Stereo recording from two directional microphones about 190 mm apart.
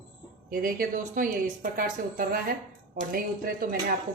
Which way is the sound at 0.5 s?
45° right (ahead or behind).